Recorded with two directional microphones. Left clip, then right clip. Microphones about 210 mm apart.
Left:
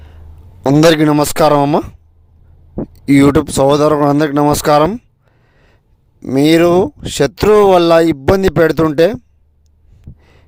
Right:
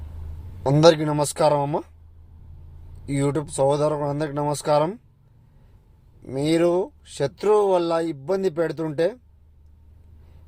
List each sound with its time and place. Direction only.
0.6 s speech: 50° left (ahead or behind)
3.1 s speech: 50° left (ahead or behind)
6.2 s speech: 50° left (ahead or behind)